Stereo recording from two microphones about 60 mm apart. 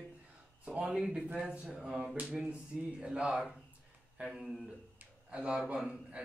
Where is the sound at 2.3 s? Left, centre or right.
Centre.